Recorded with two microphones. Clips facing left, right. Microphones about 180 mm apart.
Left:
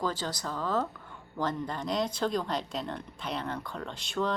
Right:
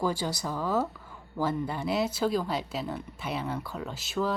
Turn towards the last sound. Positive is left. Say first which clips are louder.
# right 1 dB
turn(degrees=-5)  # may be behind; listen again after turning